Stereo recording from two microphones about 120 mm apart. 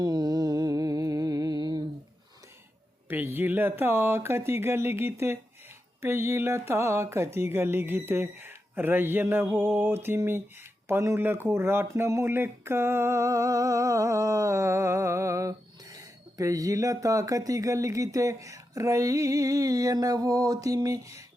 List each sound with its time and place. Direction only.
0.0 s music: 35° right (ahead or behind)
3.1 s speech: 20° right (ahead or behind)